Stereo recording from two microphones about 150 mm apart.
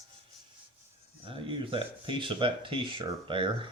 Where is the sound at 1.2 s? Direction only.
35° right (ahead or behind).